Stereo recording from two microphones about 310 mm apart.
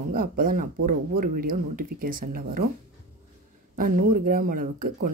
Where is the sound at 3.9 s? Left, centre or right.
Right.